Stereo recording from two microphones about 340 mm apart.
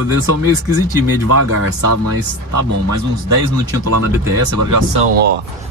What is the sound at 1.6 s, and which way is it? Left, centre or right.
Speech, right.